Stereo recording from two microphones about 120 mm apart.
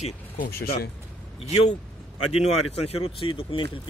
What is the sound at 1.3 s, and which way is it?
Speech, 60° left (ahead or behind).